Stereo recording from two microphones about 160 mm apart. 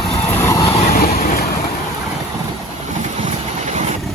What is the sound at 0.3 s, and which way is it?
Vehicle, 15° left (ahead or behind).